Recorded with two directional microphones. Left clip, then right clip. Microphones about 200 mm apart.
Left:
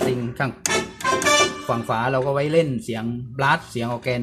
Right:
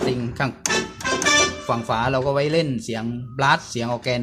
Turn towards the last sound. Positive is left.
turn(degrees=-5)  # may be behind; listen again after turning